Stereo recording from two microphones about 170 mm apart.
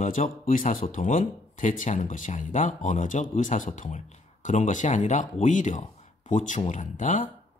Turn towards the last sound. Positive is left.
turn(degrees=50)  # may be behind; listen again after turning